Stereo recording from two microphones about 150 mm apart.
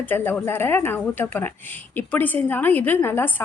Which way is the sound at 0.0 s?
10° left (ahead or behind).